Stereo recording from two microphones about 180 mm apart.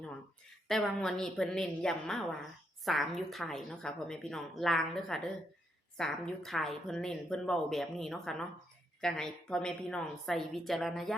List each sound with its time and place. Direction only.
0.7 s a woman's voice: 5° left (ahead or behind)